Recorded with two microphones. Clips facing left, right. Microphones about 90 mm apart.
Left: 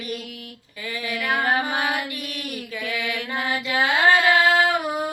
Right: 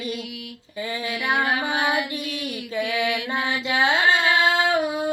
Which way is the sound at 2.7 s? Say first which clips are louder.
Right 5 dB; 25° right (ahead or behind).